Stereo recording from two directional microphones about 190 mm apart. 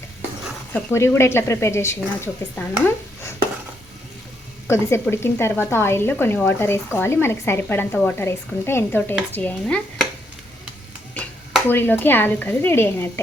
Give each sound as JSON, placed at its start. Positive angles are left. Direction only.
{"t": 0.7, "sound": "speech", "side_deg": 15}
{"t": 4.7, "sound": "speech", "side_deg": 15}
{"t": 11.1, "sound": "speech", "side_deg": 10}